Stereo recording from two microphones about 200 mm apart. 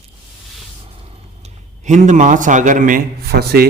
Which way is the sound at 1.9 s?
35° right (ahead or behind).